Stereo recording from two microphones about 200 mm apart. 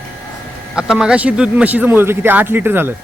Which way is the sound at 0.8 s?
5° right (ahead or behind).